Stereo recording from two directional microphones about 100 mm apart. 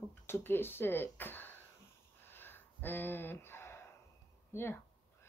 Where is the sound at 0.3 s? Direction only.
20° left (ahead or behind).